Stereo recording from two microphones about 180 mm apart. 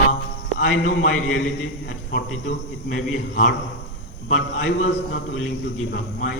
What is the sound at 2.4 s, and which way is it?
A man's voice, 50° left (ahead or behind).